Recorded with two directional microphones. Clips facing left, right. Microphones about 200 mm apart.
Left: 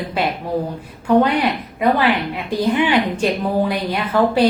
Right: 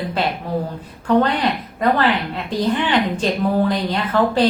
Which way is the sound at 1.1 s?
10° left (ahead or behind).